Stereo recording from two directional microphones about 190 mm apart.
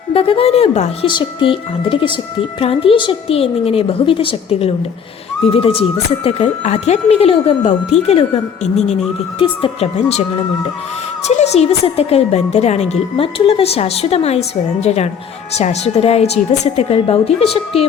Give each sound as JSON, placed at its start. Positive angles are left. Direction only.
{"t": 0.1, "sound": "a woman's voice", "side_deg": 30}
{"t": 11.3, "sound": "speech", "side_deg": 35}